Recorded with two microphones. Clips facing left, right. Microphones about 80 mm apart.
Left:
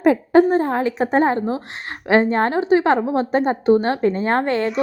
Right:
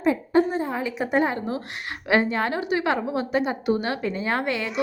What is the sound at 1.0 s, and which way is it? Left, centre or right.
A woman's voice, left.